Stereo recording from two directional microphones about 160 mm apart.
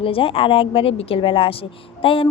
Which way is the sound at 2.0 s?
35° left (ahead or behind).